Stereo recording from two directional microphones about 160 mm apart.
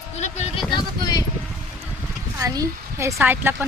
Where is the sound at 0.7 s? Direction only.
25° left (ahead or behind).